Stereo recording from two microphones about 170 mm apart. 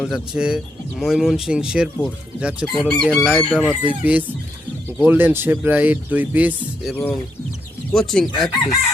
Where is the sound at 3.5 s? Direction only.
5° left (ahead or behind).